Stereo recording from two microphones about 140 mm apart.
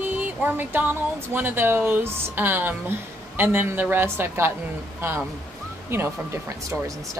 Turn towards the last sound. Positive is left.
turn(degrees=-20)  # may be behind; listen again after turning